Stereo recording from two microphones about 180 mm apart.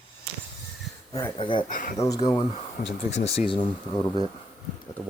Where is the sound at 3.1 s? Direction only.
35° left (ahead or behind).